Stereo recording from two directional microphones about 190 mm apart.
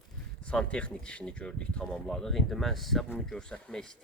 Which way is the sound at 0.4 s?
5° left (ahead or behind).